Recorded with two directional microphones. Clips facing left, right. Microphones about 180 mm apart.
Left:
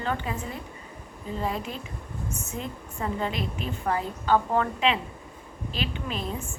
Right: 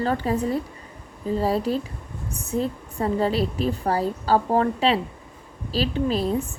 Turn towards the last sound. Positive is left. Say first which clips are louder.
# right 10 dB
turn(degrees=-35)  # may be behind; listen again after turning